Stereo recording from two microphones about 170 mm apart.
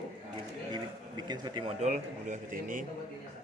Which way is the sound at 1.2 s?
25° right (ahead or behind).